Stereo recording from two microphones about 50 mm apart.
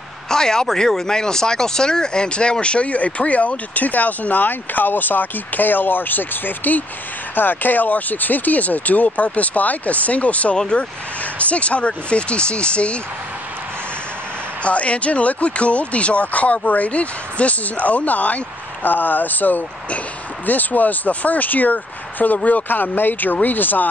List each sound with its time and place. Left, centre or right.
0.3 s speech: centre; by 10.6 s left
10.6 s speech: centre
14.6 s speech: left